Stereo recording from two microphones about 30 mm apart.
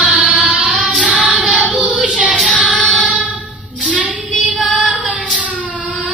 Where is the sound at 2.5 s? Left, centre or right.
Right.